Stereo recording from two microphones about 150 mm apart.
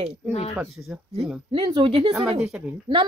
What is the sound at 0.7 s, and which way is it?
Speech, 5° right (ahead or behind).